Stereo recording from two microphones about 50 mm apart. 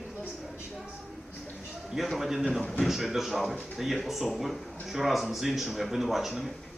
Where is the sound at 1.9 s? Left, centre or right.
Centre.